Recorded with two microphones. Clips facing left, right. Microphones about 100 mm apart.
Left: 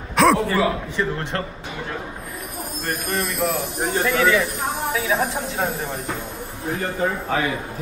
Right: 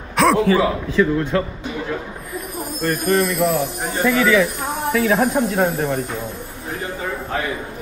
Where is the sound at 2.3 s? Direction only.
Centre (ahead or behind).